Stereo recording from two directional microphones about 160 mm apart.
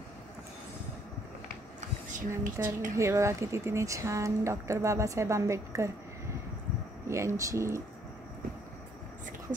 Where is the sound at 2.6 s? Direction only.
15° right (ahead or behind).